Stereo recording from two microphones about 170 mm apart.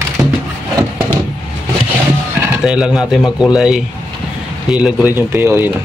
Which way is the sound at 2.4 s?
5° right (ahead or behind).